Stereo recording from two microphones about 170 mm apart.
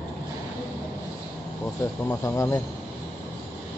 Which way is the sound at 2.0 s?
15° left (ahead or behind).